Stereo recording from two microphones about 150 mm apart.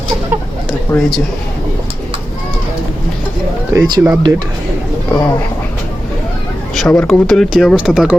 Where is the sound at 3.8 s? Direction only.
30° right (ahead or behind).